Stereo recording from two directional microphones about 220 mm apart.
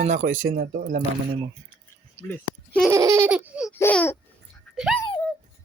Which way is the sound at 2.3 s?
5° left (ahead or behind).